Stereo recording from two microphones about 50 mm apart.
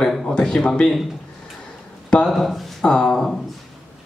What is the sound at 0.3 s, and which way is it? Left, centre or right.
Speech, centre.